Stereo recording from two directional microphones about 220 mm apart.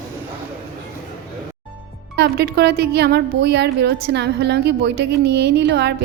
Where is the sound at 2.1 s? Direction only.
45° right (ahead or behind).